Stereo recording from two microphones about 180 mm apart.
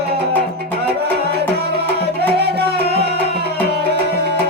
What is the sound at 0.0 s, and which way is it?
Music, 60° right (ahead or behind).